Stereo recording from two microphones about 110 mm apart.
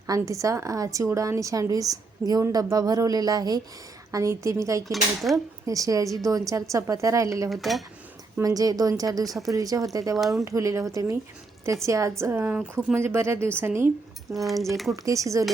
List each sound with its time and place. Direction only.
0.1 s a woman's voice: 30° right (ahead or behind)
4.9 s speech: centre (ahead or behind)
5.6 s a woman's voice: 30° right (ahead or behind)
7.5 s speech: centre (ahead or behind)
8.4 s a woman's voice: 35° right (ahead or behind)
10.2 s speech: centre (ahead or behind)
10.4 s a woman's voice: 30° right (ahead or behind)
14.3 s speech: centre (ahead or behind)
14.9 s a woman's voice: 30° right (ahead or behind)